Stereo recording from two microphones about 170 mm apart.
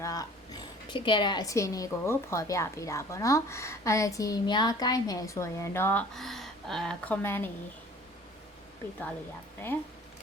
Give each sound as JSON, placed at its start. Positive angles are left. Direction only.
{"t": 0.0, "sound": "speech", "side_deg": 20}